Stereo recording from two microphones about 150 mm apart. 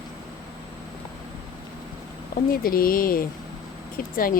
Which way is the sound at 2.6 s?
75° left (ahead or behind).